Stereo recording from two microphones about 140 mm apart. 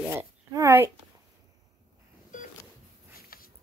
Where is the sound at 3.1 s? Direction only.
90° left.